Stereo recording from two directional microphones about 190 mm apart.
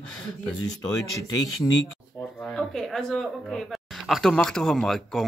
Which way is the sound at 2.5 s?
Centre (ahead or behind).